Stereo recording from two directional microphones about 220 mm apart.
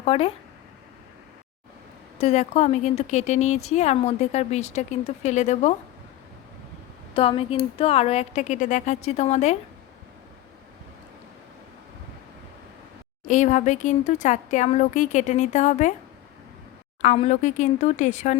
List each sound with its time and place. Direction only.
0.0 s speech: 25° left (ahead or behind)
2.1 s a woman's voice: 30° left (ahead or behind)
7.1 s speech: 25° left (ahead or behind)
13.2 s a woman's voice: 35° left (ahead or behind)
17.0 s a woman's voice: 30° left (ahead or behind)